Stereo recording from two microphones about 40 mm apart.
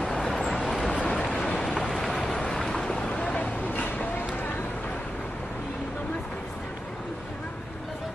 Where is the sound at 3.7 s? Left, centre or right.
Left.